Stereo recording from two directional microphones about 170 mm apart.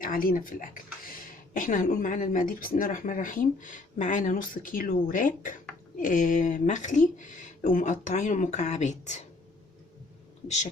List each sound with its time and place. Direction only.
0.0 s speech: 55° left (ahead or behind)